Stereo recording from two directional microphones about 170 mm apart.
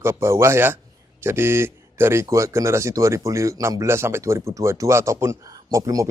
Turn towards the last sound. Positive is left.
turn(degrees=-20)  # may be behind; listen again after turning